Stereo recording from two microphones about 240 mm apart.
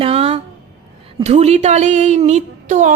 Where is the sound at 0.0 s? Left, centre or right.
Right.